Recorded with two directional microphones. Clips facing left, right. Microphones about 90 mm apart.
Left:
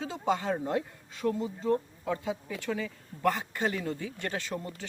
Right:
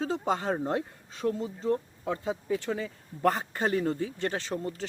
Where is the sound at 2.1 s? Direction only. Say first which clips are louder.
Right 3 dB; 35° right (ahead or behind).